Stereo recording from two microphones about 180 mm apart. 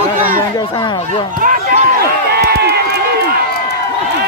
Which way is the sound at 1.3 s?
50° right (ahead or behind).